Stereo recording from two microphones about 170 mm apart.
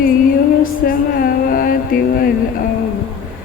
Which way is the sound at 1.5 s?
55° left (ahead or behind).